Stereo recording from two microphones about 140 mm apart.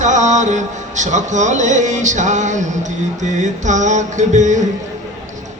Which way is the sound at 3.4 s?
60° right (ahead or behind).